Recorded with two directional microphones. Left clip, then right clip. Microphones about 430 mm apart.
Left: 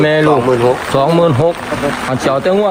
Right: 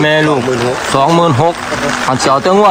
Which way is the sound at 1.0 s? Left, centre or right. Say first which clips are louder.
Right 3 dB; centre.